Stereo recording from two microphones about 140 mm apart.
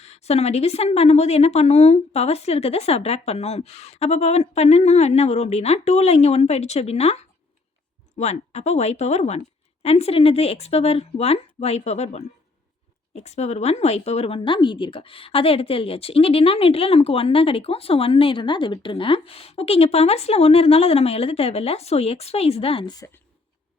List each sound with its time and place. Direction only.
0.0 s a woman's voice: 50° left (ahead or behind)
23.0 s speech: 20° left (ahead or behind)